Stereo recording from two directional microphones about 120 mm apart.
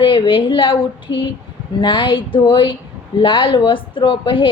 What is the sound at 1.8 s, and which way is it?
A woman's voice, 40° left (ahead or behind).